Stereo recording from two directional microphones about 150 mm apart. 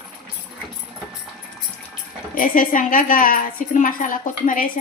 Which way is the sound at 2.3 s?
65° left (ahead or behind).